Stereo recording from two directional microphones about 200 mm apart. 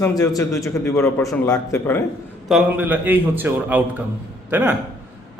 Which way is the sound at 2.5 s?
10° right (ahead or behind).